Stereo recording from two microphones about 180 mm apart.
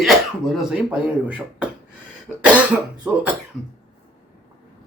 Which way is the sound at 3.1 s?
10° right (ahead or behind).